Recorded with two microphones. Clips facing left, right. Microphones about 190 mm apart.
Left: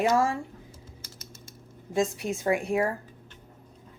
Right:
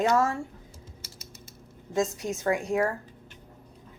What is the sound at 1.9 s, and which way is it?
Speech, 15° left (ahead or behind).